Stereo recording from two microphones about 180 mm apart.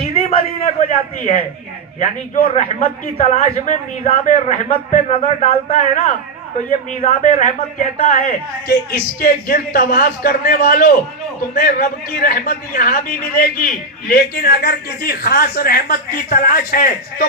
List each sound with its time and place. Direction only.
0.0 s a sound: 40° left (ahead or behind)
2.0 s a man's voice: 45° left (ahead or behind)
7.9 s a man's voice: 55° left (ahead or behind)